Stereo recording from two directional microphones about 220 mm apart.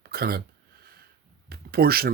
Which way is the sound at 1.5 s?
45° right (ahead or behind).